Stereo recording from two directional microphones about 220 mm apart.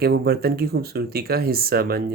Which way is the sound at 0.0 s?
45° right (ahead or behind).